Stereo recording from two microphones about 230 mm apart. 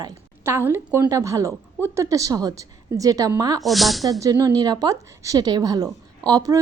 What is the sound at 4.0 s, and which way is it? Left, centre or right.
A woman's voice, centre.